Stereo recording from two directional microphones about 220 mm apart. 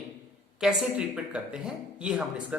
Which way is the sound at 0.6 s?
5° right (ahead or behind).